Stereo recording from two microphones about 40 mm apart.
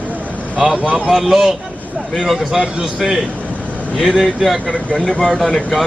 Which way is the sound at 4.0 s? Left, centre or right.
Centre.